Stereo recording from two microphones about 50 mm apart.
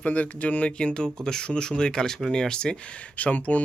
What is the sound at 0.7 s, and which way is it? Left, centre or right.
Speech, centre.